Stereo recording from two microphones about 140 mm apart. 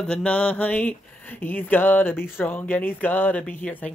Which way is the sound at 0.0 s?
5° left (ahead or behind).